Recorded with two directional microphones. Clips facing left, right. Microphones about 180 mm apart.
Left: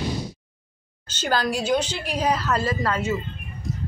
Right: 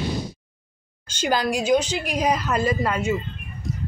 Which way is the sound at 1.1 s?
10° right (ahead or behind).